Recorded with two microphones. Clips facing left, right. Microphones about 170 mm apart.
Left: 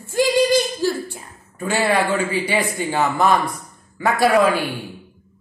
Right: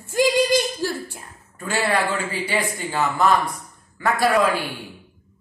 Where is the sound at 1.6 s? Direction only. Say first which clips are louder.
Left 3 dB; 20° left (ahead or behind).